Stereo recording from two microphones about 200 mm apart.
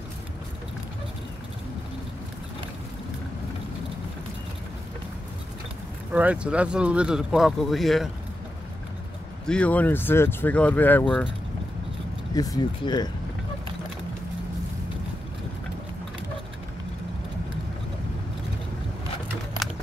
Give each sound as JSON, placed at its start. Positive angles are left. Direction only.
{"t": 6.1, "sound": "speech", "side_deg": -5}
{"t": 9.5, "sound": "speech", "side_deg": 5}
{"t": 12.4, "sound": "speech", "side_deg": 20}